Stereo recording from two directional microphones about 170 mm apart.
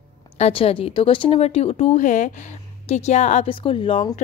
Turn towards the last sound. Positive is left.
turn(degrees=35)  # may be behind; listen again after turning